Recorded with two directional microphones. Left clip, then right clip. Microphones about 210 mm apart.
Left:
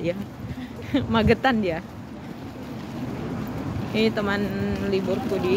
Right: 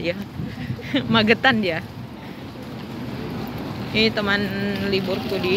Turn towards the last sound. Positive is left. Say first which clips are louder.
# right 1 dB
turn(degrees=5)  # may be behind; listen again after turning